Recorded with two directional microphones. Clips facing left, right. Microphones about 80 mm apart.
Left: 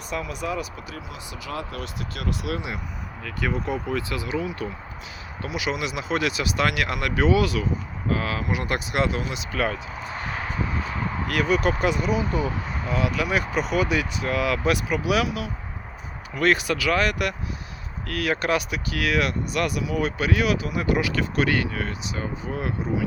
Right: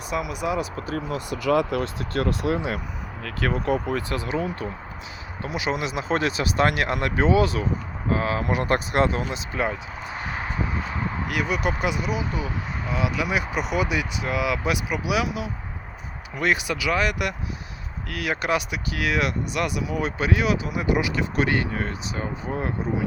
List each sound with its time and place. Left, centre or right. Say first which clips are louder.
0.1 s speech: right 3 dB; centre
0.8 s speech: right 8 dB; right
1.5 s speech: right 11 dB; right
1.8 s speech: right 7 dB; right
3.2 s speech: right 3 dB; right
5.4 s speech: right 1 dB; right
8.4 s speech: right 4 dB; right
9.5 s speech: left 3 dB; centre